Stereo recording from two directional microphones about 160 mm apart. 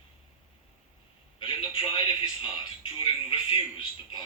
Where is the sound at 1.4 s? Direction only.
30° left (ahead or behind).